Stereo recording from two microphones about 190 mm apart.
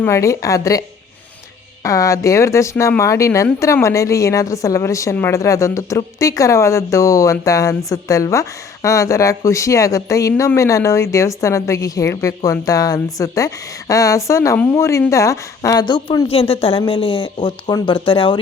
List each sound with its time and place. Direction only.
0.0 s speech: 15° left (ahead or behind)
1.8 s a woman's voice: 15° left (ahead or behind)